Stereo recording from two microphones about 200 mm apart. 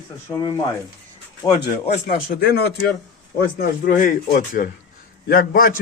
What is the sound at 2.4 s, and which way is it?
Speech, 50° left (ahead or behind).